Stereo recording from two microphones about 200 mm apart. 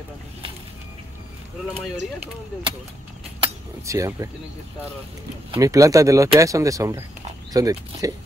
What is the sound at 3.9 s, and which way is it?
Speech, 15° right (ahead or behind).